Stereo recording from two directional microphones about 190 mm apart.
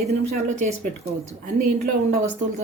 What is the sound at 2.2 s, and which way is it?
Speech, 40° right (ahead or behind).